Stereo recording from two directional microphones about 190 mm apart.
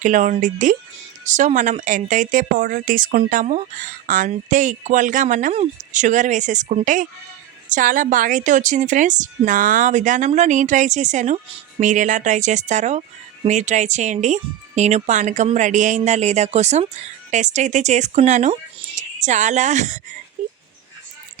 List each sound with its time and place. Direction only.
0.0 s speech: 40° right (ahead or behind)